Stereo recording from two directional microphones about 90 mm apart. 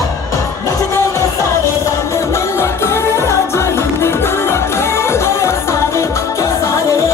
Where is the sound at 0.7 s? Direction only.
35° left (ahead or behind).